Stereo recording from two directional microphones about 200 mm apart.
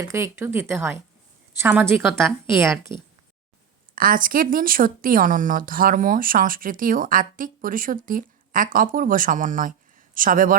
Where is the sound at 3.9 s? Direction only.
45° right (ahead or behind).